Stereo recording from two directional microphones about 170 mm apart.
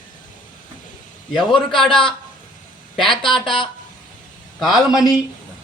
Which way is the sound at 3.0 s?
30° left (ahead or behind).